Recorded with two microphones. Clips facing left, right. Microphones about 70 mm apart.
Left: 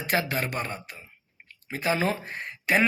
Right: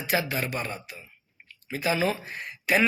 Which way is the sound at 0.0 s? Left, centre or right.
Left.